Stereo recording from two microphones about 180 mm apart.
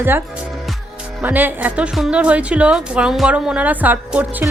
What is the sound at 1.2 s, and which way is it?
A woman's voice, 10° right (ahead or behind).